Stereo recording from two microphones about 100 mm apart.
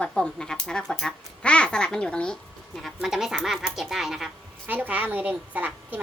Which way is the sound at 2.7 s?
Centre (ahead or behind).